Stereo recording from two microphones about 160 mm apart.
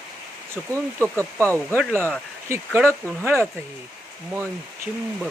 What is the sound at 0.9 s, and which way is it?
Speech, 10° left (ahead or behind).